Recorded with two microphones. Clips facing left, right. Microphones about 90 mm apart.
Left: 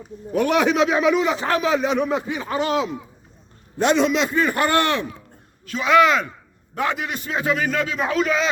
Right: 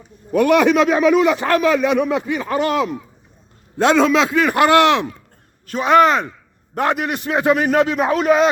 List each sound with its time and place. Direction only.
0.3 s a man's voice: 65° right (ahead or behind)
3.8 s a man's voice: 90° right
5.6 s speech: 45° right (ahead or behind)
6.7 s a man's voice: 55° right (ahead or behind)